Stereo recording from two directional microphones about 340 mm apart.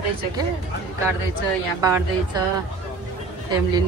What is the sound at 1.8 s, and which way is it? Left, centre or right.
Speech, centre.